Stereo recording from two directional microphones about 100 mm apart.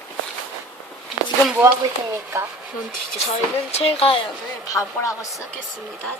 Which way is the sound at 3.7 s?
75° left (ahead or behind).